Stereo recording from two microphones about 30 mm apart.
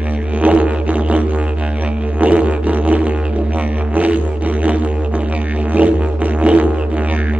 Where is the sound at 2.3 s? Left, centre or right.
Right.